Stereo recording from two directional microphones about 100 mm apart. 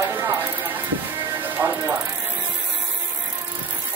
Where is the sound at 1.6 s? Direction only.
20° right (ahead or behind).